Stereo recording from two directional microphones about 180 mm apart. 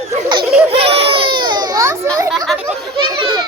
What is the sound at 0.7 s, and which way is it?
Baby cry, 35° right (ahead or behind).